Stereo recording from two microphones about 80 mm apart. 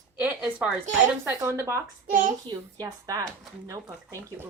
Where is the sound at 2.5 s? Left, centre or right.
Right.